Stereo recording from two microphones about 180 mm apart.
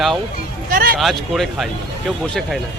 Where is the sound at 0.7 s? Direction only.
55° right (ahead or behind).